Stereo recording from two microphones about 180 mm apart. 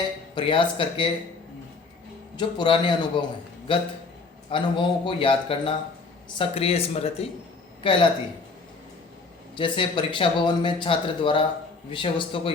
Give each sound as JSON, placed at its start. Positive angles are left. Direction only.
{"t": 0.3, "sound": "speech", "side_deg": 25}
{"t": 2.3, "sound": "speech", "side_deg": 25}
{"t": 9.6, "sound": "speech", "side_deg": 25}